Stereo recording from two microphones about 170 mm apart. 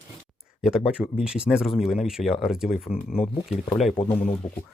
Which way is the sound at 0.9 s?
5° right (ahead or behind).